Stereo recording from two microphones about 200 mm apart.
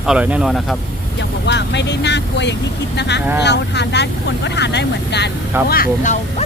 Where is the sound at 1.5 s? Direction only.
60° left (ahead or behind).